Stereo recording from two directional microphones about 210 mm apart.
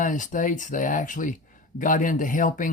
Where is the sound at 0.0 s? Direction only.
40° left (ahead or behind).